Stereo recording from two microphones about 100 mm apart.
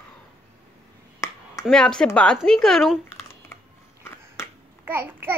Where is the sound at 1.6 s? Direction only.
5° left (ahead or behind).